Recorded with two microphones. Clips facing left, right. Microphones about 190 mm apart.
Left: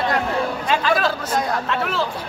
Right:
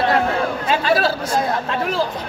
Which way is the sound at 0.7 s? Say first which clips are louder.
Right 2 dB; 35° right (ahead or behind).